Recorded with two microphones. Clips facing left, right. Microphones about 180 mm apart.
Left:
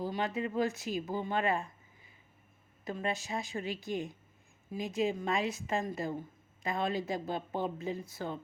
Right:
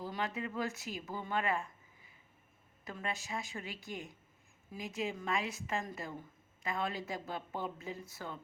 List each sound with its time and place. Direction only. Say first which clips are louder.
0.0 s a woman's voice: left 5 dB; 25° left (ahead or behind)
2.8 s a woman's voice: left 6 dB; 20° left (ahead or behind)
3.2 s speech: left 6 dB; 35° left (ahead or behind)
4.7 s a woman's voice: left 6 dB; 20° left (ahead or behind)
4.9 s speech: left 7 dB; 30° left (ahead or behind)
5.3 s a woman's voice: left 4 dB; 20° left (ahead or behind)